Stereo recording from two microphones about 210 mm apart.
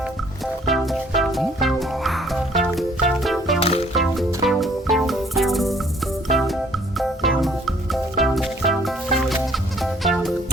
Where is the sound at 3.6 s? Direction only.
30° left (ahead or behind).